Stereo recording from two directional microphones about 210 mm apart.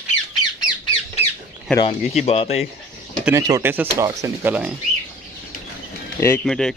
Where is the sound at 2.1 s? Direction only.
30° left (ahead or behind).